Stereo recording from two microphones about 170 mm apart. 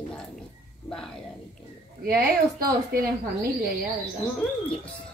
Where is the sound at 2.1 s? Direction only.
60° right (ahead or behind).